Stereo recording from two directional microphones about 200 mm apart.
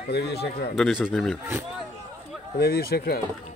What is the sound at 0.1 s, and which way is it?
Speech, 55° left (ahead or behind).